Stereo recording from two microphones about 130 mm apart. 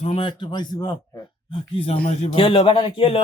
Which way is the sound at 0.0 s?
45° left (ahead or behind).